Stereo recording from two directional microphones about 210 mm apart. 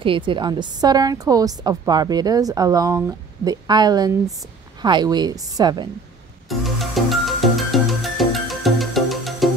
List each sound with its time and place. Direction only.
0.0 s a woman's voice: 25° right (ahead or behind)
6.6 s music: centre (ahead or behind)